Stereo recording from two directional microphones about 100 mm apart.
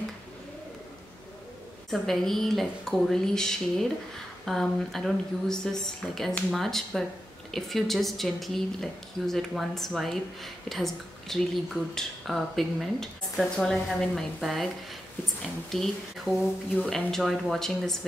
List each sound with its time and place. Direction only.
1.9 s speech: 5° left (ahead or behind)
15.7 s speech: centre (ahead or behind)